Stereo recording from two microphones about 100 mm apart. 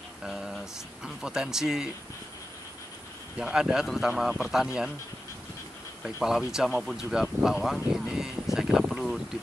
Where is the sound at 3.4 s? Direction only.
5° right (ahead or behind).